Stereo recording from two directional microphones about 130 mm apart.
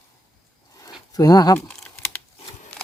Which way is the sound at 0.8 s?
30° left (ahead or behind).